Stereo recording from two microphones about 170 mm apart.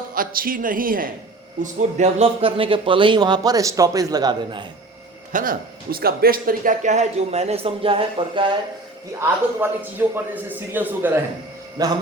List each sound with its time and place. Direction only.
0.1 s speech: 55° right (ahead or behind)
1.6 s speech: 40° right (ahead or behind); by 4.7 s 25° right (ahead or behind)
5.3 s a man's voice: 55° right (ahead or behind); by 8.5 s 30° right (ahead or behind)
9.6 s a man's voice: 10° right (ahead or behind)
11.8 s speech: 20° right (ahead or behind)